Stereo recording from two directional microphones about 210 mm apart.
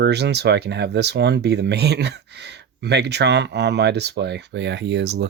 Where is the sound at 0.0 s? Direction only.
50° right (ahead or behind).